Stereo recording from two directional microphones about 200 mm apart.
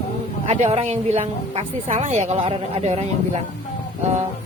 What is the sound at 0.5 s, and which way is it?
A woman's voice, 30° right (ahead or behind).